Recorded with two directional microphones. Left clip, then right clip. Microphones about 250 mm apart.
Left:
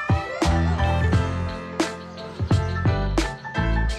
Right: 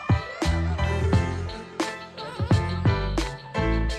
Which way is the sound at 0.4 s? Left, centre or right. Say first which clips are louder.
Left 5 dB; centre.